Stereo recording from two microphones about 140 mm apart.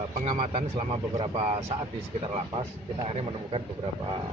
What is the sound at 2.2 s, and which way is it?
A man's voice, 35° right (ahead or behind).